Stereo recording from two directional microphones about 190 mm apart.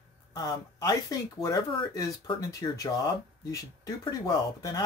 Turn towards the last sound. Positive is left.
turn(degrees=20)  # may be behind; listen again after turning